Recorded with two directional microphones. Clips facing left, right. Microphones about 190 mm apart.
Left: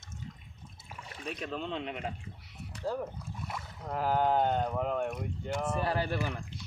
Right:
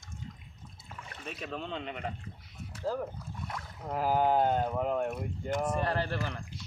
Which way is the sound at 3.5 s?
5° left (ahead or behind).